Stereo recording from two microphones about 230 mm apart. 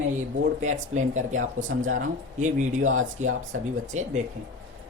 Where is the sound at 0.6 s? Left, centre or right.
Right.